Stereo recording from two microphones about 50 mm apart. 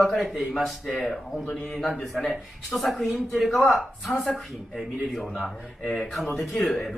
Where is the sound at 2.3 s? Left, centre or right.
Centre.